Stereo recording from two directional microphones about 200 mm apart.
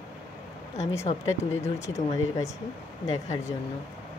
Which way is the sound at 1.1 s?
30° left (ahead or behind).